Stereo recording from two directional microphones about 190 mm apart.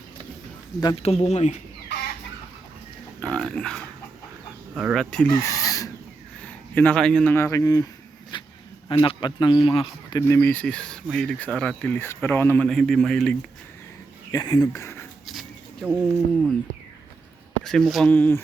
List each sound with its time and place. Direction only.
0.8 s speech: 25° left (ahead or behind)
3.2 s a sound: 5° left (ahead or behind)
4.7 s speech: 5° right (ahead or behind)
5.3 s chicken: 15° left (ahead or behind)
6.4 s speech: 10° left (ahead or behind)
8.3 s a sound: 25° left (ahead or behind)
8.9 s speech: 25° left (ahead or behind)
10.2 s speech: 15° left (ahead or behind)
14.3 s speech: 20° left (ahead or behind)
15.3 s a sound: centre (ahead or behind)
17.6 s speech: 5° left (ahead or behind)